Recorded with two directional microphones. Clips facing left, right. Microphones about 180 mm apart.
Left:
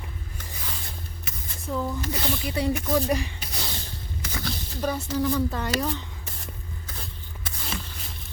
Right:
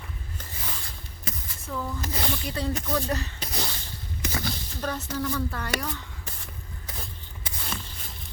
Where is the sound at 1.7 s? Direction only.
15° left (ahead or behind).